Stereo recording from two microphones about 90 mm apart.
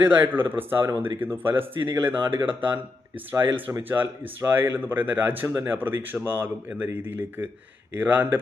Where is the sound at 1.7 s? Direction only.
65° right (ahead or behind).